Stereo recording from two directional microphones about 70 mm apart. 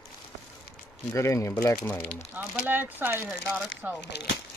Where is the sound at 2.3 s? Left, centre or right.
Right.